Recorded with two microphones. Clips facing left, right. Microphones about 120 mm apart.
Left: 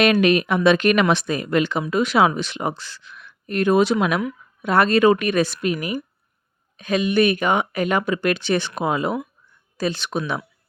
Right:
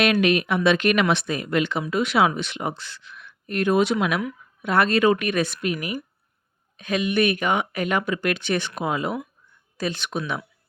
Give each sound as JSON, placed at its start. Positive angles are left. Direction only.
{"t": 0.0, "sound": "speech", "side_deg": 40}